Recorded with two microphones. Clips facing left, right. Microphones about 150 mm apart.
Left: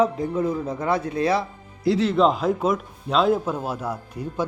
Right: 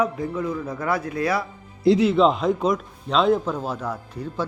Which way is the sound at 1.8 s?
20° right (ahead or behind).